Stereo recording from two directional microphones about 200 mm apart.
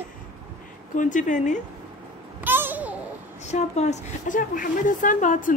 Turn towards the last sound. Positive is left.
turn(degrees=40)  # may be behind; listen again after turning